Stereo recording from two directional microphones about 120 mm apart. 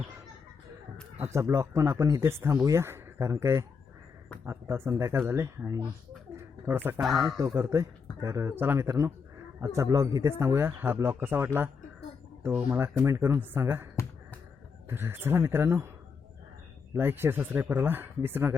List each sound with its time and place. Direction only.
1.2 s speech: 25° right (ahead or behind)
6.3 s a sound: 20° right (ahead or behind)
7.0 s speech: centre (ahead or behind)
7.3 s speech: 20° right (ahead or behind)
14.8 s speech: 20° right (ahead or behind)
16.9 s speech: 20° right (ahead or behind)